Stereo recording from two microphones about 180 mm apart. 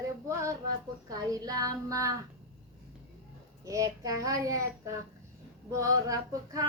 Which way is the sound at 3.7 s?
20° right (ahead or behind).